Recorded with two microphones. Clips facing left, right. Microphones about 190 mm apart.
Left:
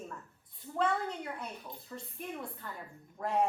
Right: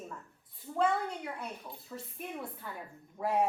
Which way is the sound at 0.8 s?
5° right (ahead or behind).